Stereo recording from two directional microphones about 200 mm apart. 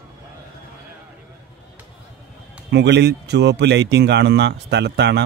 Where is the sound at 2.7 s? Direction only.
60° right (ahead or behind).